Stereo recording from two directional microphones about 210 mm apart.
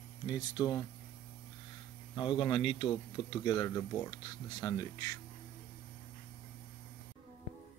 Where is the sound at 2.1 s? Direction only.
20° left (ahead or behind).